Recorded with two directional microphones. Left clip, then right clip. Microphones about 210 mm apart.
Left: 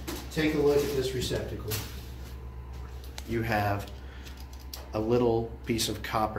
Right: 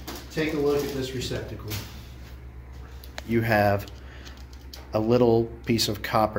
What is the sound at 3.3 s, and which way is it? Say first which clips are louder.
Speech: right 7 dB; 45° right (ahead or behind).